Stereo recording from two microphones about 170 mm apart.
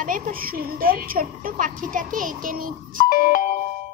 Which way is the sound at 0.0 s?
55° right (ahead or behind).